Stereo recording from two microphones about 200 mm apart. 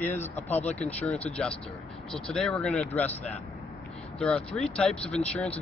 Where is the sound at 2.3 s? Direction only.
5° left (ahead or behind).